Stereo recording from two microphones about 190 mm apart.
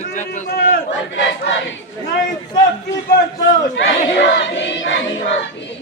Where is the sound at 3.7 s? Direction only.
75° left (ahead or behind).